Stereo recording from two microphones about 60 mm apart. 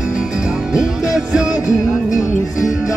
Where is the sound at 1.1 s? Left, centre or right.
Centre.